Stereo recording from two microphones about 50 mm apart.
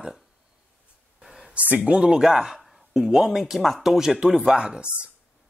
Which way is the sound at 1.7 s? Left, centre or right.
Right.